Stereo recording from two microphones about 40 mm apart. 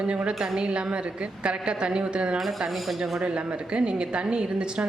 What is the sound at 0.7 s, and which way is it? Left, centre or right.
A woman's voice, right.